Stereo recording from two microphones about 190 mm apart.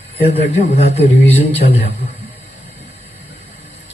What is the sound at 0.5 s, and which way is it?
A man's voice, 35° left (ahead or behind).